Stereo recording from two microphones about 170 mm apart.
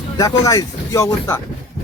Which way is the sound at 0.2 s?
20° left (ahead or behind).